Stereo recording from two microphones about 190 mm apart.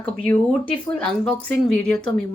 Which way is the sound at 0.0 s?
10° left (ahead or behind).